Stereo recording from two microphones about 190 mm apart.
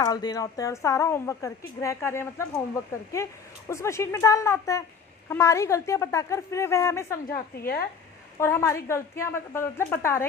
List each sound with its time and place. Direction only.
0.0 s a woman's voice: 20° left (ahead or behind)
7.3 s a woman's voice: 50° left (ahead or behind)
8.4 s a woman's voice: 15° left (ahead or behind)